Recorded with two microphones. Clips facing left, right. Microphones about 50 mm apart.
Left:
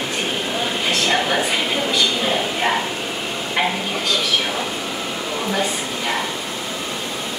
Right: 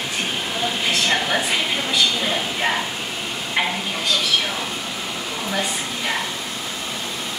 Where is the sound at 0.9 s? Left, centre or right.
Centre.